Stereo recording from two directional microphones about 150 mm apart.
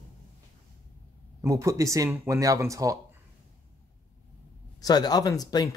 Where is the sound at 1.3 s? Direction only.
20° right (ahead or behind).